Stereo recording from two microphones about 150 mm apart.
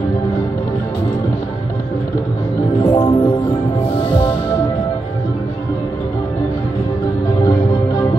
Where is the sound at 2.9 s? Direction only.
30° left (ahead or behind).